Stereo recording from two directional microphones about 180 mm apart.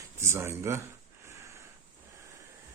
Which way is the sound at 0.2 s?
15° right (ahead or behind).